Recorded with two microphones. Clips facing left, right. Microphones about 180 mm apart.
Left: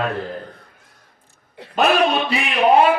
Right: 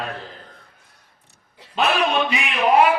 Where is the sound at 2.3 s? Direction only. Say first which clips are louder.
Left 3 dB; 35° left (ahead or behind).